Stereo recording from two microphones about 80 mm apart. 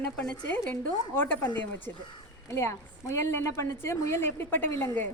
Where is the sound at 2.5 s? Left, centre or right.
Left.